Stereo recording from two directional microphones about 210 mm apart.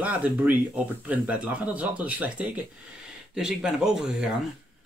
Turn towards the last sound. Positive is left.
turn(degrees=-5)  # may be behind; listen again after turning